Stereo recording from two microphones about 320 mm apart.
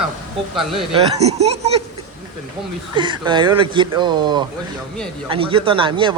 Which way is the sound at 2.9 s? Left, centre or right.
Centre.